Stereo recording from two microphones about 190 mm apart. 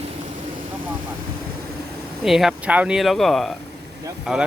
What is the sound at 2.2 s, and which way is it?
Speech, centre (ahead or behind).